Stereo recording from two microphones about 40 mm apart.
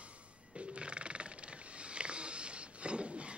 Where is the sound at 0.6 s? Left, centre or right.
Right.